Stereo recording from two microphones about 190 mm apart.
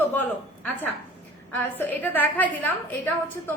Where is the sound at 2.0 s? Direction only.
10° left (ahead or behind).